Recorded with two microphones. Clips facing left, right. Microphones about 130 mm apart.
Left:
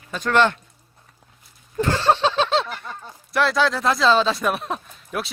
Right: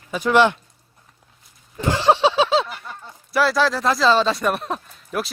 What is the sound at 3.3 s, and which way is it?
Speech, centre (ahead or behind).